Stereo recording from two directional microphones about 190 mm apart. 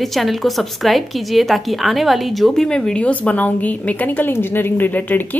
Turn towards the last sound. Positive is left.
turn(degrees=10)  # may be behind; listen again after turning